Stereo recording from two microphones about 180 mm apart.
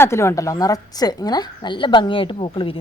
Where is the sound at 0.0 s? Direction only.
15° left (ahead or behind).